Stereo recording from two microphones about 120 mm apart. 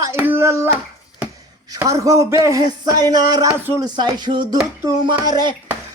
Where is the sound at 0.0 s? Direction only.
20° right (ahead or behind).